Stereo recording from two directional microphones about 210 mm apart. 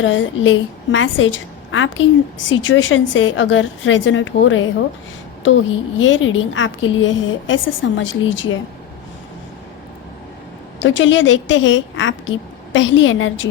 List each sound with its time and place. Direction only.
0.0 s a woman's voice: 65° left (ahead or behind)
6.0 s a woman's voice: 65° left (ahead or behind)
10.8 s a woman's voice: 60° left (ahead or behind)